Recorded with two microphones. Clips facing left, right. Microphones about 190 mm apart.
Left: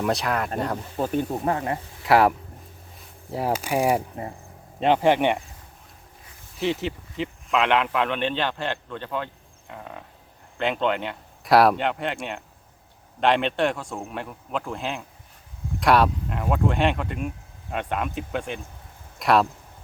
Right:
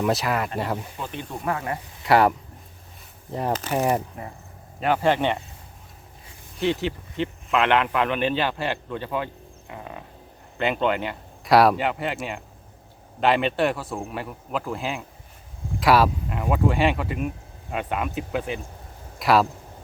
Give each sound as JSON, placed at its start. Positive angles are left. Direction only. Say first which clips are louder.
{"t": 0.0, "sound": "speech", "louder": "right 1 dB", "side_deg": 0}
{"t": 0.9, "sound": "speech", "louder": "left 9 dB", "side_deg": 45}
{"t": 1.5, "sound": "speech", "louder": "left 2 dB", "side_deg": 25}
{"t": 2.0, "sound": "speech", "louder": "even", "side_deg": 0}
{"t": 6.6, "sound": "speech", "louder": "right 2 dB", "side_deg": 0}